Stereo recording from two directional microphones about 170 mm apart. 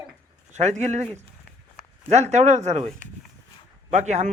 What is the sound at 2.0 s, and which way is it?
Speech, 40° right (ahead or behind).